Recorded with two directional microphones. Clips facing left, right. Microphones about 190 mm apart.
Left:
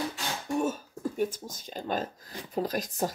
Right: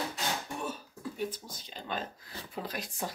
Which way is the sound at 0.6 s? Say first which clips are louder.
Left 9 dB; 45° left (ahead or behind).